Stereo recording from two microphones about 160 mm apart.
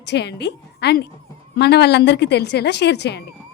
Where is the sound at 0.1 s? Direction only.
90° left.